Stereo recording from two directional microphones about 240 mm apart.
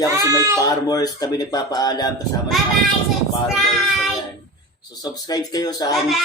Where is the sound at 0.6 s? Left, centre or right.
Centre.